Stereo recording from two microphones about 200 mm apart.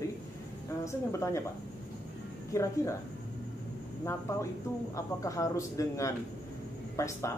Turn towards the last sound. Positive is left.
turn(degrees=15)  # may be behind; listen again after turning